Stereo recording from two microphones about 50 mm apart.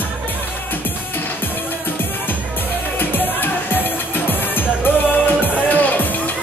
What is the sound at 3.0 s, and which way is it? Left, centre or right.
Music, left.